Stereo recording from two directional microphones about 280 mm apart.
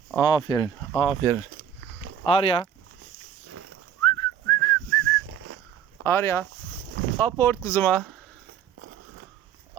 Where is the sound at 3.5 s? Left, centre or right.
Right.